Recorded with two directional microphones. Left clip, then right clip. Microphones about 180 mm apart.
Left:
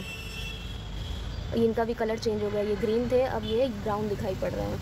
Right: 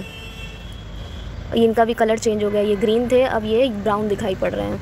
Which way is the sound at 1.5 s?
20° right (ahead or behind).